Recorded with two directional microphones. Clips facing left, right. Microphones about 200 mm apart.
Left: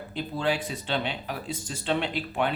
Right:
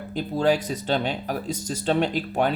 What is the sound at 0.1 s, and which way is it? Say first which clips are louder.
Speech: right 6 dB; 40° right (ahead or behind).